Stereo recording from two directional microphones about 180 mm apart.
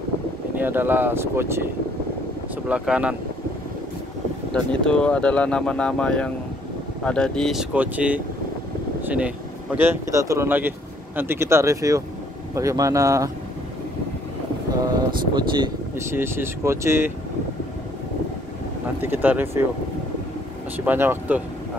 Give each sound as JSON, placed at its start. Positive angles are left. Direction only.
{"t": 0.6, "sound": "speech", "side_deg": -10}
{"t": 2.7, "sound": "speech", "side_deg": -5}
{"t": 4.8, "sound": "speech", "side_deg": 5}
{"t": 7.7, "sound": "speech", "side_deg": -10}
{"t": 14.8, "sound": "vehicle", "side_deg": -25}
{"t": 16.1, "sound": "speech", "side_deg": -15}
{"t": 18.9, "sound": "speech", "side_deg": -10}
{"t": 20.8, "sound": "speech", "side_deg": -10}